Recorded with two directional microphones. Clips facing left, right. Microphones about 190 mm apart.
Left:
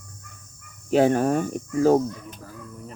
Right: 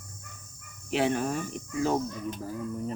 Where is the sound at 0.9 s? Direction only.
45° left (ahead or behind).